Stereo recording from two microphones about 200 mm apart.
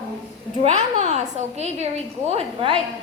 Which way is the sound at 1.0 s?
35° right (ahead or behind).